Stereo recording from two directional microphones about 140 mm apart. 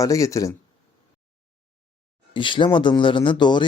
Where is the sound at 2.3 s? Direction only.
35° left (ahead or behind).